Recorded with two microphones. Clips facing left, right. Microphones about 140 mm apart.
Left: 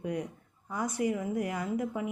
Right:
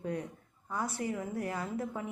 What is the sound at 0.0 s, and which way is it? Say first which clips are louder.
Speech: left 2 dB; 15° left (ahead or behind).